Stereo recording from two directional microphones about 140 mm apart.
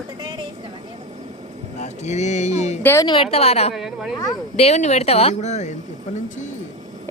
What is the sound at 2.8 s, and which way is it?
Speech, 20° left (ahead or behind).